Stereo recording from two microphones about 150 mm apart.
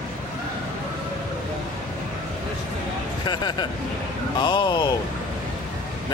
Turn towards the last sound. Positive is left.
turn(degrees=30)  # may be behind; listen again after turning